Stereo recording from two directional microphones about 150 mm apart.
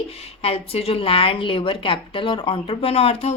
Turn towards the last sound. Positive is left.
turn(degrees=40)  # may be behind; listen again after turning